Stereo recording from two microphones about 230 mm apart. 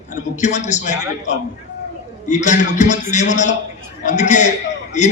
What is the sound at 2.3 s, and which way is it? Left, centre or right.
A man's voice, left.